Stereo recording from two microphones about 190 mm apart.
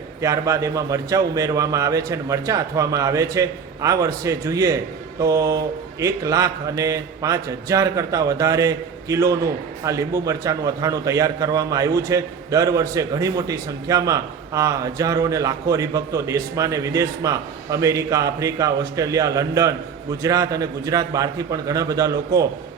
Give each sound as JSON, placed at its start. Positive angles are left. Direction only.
{"t": 0.2, "sound": "a man's voice", "side_deg": -15}